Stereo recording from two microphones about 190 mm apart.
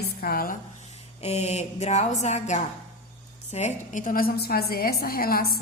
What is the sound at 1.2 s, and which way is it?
A woman's voice, 35° left (ahead or behind).